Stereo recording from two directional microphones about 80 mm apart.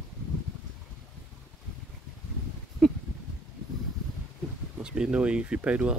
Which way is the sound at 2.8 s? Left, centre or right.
Centre.